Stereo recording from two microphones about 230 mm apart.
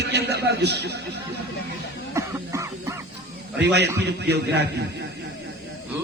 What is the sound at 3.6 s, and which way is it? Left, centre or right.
A man's voice, right.